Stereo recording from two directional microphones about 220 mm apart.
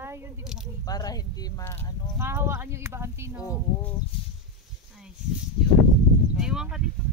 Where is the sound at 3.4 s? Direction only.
10° left (ahead or behind).